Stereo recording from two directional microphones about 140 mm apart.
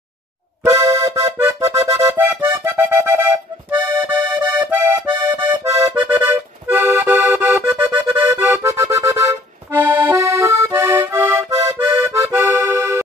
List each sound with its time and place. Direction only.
0.7 s accordion: 25° right (ahead or behind)